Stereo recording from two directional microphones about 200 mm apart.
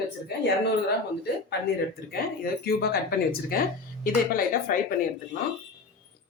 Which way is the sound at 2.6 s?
50° left (ahead or behind).